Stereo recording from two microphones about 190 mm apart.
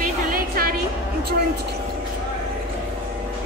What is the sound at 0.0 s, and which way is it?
Music, 50° right (ahead or behind).